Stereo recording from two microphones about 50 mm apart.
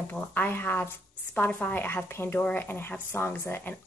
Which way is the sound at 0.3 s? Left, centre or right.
Left.